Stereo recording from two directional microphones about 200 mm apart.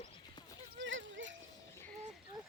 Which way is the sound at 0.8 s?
70° right (ahead or behind).